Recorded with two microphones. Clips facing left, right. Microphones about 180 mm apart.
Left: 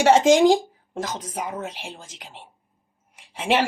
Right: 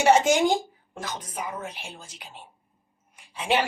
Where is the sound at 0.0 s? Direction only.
90° left.